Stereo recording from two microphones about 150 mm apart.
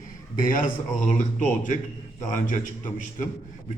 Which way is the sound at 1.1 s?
60° left (ahead or behind).